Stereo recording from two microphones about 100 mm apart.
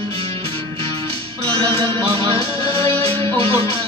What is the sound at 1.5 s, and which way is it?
Music, 60° right (ahead or behind).